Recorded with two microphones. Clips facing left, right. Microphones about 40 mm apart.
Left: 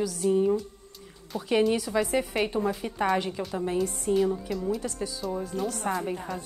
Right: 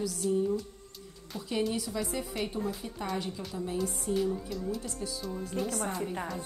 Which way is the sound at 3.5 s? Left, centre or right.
Left.